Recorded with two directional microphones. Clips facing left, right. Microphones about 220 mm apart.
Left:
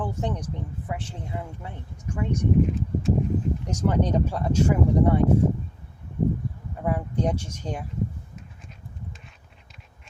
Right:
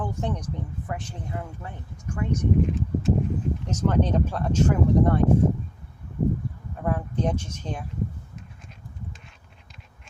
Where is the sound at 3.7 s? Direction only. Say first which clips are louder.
Right 1 dB; 10° left (ahead or behind).